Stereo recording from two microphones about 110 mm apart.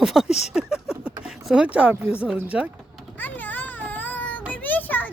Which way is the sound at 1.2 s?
10° right (ahead or behind).